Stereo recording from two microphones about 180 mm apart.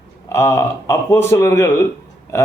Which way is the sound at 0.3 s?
15° left (ahead or behind).